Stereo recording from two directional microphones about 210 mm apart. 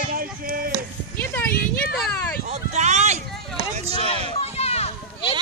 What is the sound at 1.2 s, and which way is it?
Speech, 10° left (ahead or behind).